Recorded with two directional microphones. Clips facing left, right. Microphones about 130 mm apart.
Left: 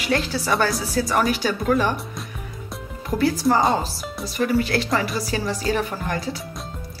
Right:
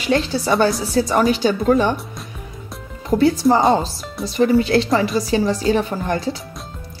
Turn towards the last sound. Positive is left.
turn(degrees=-25)  # may be behind; listen again after turning